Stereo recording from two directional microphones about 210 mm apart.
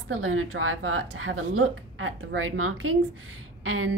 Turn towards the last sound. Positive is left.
turn(degrees=-80)